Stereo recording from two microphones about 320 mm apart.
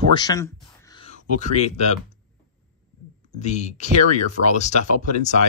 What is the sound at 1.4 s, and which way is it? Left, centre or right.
Speech, left.